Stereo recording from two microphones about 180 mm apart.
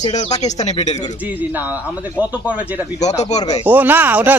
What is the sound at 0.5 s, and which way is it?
Speech, 40° left (ahead or behind).